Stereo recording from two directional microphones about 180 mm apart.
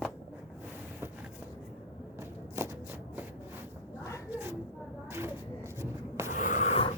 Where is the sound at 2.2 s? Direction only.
15° right (ahead or behind).